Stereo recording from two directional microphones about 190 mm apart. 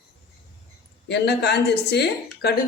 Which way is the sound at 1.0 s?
60° left (ahead or behind).